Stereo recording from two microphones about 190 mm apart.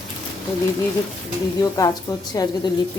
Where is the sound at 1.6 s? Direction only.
20° left (ahead or behind).